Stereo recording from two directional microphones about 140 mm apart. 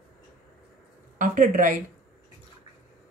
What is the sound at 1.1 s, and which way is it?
Speech, 70° right (ahead or behind).